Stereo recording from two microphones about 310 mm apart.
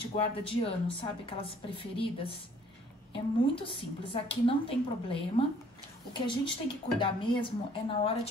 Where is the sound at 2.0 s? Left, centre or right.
Centre.